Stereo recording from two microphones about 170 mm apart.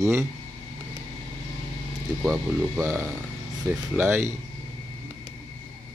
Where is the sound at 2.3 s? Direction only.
15° right (ahead or behind).